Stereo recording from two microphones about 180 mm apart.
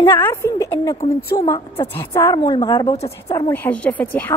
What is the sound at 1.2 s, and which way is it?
Speech, 60° left (ahead or behind).